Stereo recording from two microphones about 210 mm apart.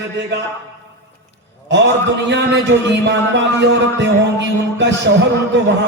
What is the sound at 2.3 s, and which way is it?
Speech, 55° right (ahead or behind).